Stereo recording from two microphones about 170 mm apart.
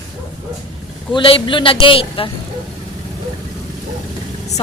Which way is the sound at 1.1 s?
30° left (ahead or behind).